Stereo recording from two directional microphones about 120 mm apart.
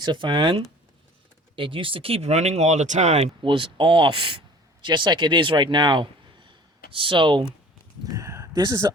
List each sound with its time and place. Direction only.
0.0 s speech: 40° right (ahead or behind); by 3.2 s 75° right (ahead or behind)
3.4 s speech: 45° right (ahead or behind)
8.1 s a sound: 25° right (ahead or behind)